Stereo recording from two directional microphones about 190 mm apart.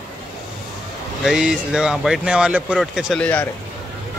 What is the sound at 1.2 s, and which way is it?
Speech, 5° right (ahead or behind).